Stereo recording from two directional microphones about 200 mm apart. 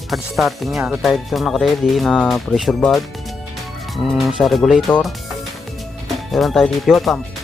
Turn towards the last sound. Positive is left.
turn(degrees=0)  # may be behind; listen again after turning